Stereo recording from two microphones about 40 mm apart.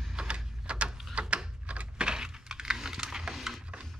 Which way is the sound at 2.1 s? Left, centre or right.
Centre.